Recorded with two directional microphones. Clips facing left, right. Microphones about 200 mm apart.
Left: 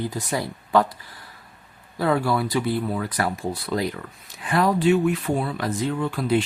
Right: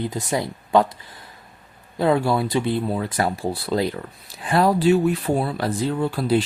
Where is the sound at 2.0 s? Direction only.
25° right (ahead or behind).